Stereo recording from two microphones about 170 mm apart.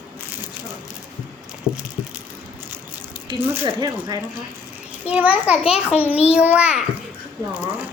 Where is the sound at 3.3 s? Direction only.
15° right (ahead or behind).